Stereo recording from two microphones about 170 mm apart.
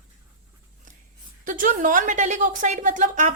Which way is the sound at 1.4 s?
50° right (ahead or behind).